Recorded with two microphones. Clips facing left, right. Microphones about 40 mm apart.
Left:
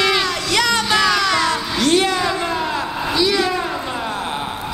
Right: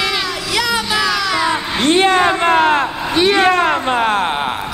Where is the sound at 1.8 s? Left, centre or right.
Right.